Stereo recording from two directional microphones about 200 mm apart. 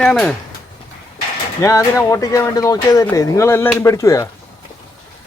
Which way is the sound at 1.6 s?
15° left (ahead or behind).